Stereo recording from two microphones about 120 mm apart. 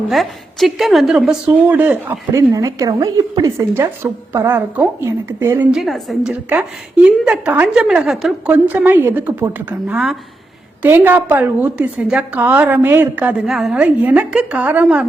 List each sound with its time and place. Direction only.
0.1 s a woman's voice: centre (ahead or behind); by 2.4 s 15° right (ahead or behind)
2.5 s a woman's voice: 30° right (ahead or behind)
5.7 s a woman's voice: centre (ahead or behind)
6.5 s a woman's voice: 10° right (ahead or behind)
8.4 s a woman's voice: 15° right (ahead or behind)